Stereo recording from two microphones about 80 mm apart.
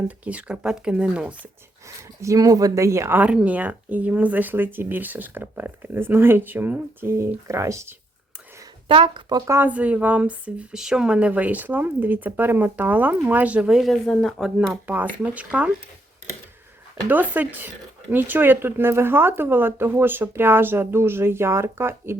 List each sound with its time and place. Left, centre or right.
0.3 s speech: centre
2.2 s speech: right
3.2 s speech: centre; by 7.9 s right
8.9 s speech: right
9.6 s speech: centre
13.9 s speech: centre
15.2 s speech: centre
17.1 s speech: right